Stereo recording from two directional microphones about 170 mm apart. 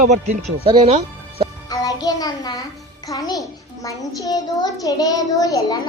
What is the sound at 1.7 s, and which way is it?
Music, 20° left (ahead or behind).